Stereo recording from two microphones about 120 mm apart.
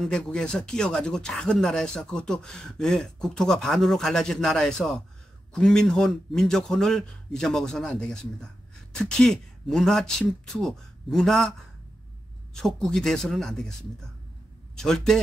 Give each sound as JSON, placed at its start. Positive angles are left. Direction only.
{"t": 0.0, "sound": "speech", "side_deg": 5}
{"t": 14.8, "sound": "speech", "side_deg": 5}